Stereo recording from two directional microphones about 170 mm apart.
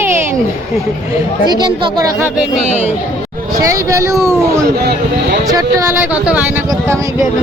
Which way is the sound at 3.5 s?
20° right (ahead or behind).